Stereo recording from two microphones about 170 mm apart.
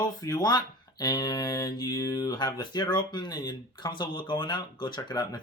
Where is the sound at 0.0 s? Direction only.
25° left (ahead or behind).